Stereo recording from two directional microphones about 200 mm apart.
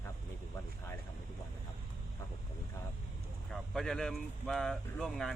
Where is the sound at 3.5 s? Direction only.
Centre (ahead or behind).